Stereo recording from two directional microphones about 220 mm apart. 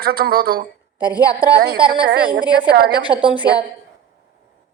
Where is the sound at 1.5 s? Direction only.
45° right (ahead or behind).